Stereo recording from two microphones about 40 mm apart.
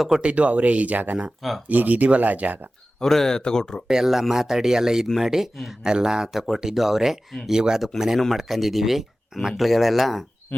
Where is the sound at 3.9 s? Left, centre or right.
Centre.